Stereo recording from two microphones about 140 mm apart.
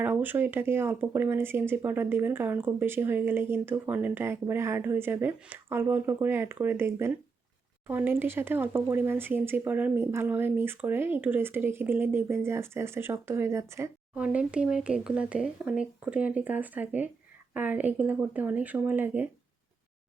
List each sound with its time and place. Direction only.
0.0 s speech: 15° right (ahead or behind)
14.2 s speech: 10° right (ahead or behind)